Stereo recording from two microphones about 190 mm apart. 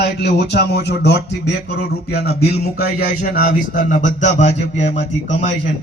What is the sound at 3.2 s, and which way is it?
Speech, 45° left (ahead or behind).